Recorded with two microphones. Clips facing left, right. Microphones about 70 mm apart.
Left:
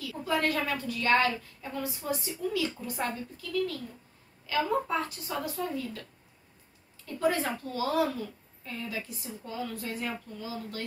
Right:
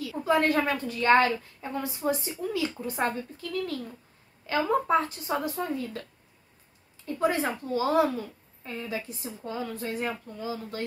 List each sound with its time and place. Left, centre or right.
0.2 s a woman's voice: right
7.2 s a woman's voice: right